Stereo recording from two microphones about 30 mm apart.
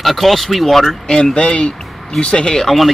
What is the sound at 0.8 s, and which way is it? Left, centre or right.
Speech, centre.